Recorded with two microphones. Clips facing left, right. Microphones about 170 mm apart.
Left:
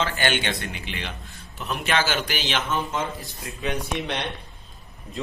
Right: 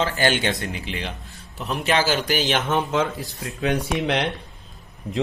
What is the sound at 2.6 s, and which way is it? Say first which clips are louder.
Speech: right 5 dB; 85° right.